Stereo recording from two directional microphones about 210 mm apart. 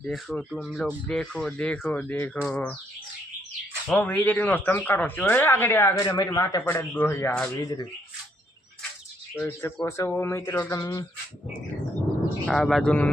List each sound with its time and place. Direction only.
0.0 s speech: 5° left (ahead or behind)
3.8 s speech: 5° left (ahead or behind)
9.3 s speech: 10° left (ahead or behind)
12.5 s speech: centre (ahead or behind)